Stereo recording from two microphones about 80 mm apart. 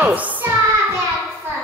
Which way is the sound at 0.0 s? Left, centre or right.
Centre.